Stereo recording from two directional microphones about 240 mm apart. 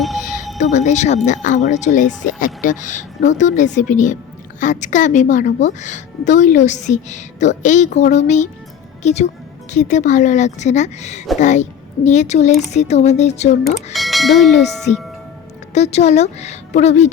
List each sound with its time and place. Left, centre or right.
0.0 s music: centre
0.6 s a woman's voice: left
13.9 s speech: centre
15.7 s a woman's voice: left